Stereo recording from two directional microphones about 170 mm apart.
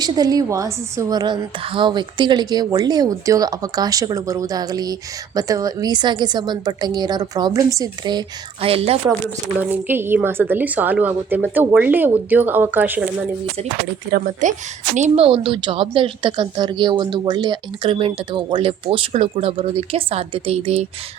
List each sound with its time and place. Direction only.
0.0 s a woman's voice: 20° right (ahead or behind)
8.6 s speech: 35° right (ahead or behind)
9.6 s a woman's voice: 10° right (ahead or behind)
14.1 s speech: 55° right (ahead or behind)
14.9 s speech: 40° right (ahead or behind)